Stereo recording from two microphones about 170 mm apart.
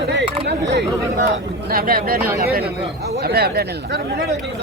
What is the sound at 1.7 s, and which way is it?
Speech, 60° right (ahead or behind).